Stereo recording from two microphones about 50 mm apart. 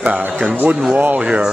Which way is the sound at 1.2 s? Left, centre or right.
Right.